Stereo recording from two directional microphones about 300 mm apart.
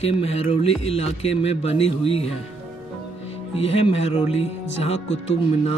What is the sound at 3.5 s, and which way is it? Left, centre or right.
Speech, left.